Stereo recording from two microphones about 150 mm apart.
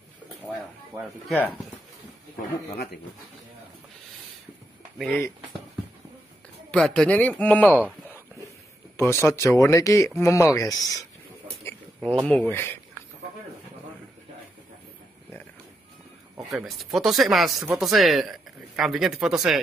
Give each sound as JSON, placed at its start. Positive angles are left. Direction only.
{"t": 1.3, "sound": "speech", "side_deg": 10}
{"t": 4.9, "sound": "speech", "side_deg": 0}
{"t": 6.7, "sound": "speech", "side_deg": 5}
{"t": 8.9, "sound": "speech", "side_deg": 15}
{"t": 12.3, "sound": "speech", "side_deg": 10}
{"t": 16.3, "sound": "speech", "side_deg": 0}